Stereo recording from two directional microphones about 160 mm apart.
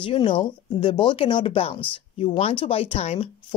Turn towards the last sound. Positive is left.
turn(degrees=40)  # may be behind; listen again after turning